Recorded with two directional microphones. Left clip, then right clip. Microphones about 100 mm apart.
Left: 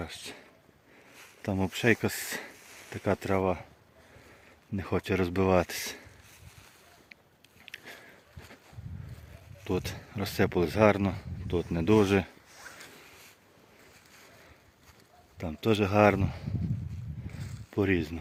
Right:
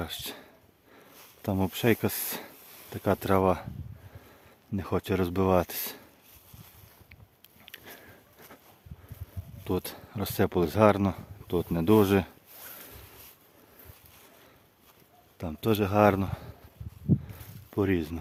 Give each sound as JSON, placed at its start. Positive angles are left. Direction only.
{"t": 0.0, "sound": "a sound", "side_deg": -50}
{"t": 1.4, "sound": "speech", "side_deg": -30}
{"t": 3.2, "sound": "speech", "side_deg": -45}
{"t": 3.4, "sound": "speech", "side_deg": -65}
{"t": 4.8, "sound": "speech", "side_deg": -20}
{"t": 7.6, "sound": "sniff", "side_deg": -30}
{"t": 9.6, "sound": "speech", "side_deg": -25}
{"t": 15.4, "sound": "speech", "side_deg": -15}
{"t": 16.2, "sound": "speech", "side_deg": -45}
{"t": 17.7, "sound": "speech", "side_deg": -25}